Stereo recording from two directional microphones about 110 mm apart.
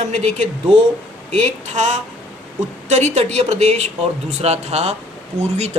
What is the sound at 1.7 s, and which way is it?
A woman's voice, 90° right.